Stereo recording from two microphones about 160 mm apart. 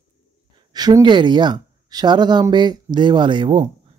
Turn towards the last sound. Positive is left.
turn(degrees=-30)  # may be behind; listen again after turning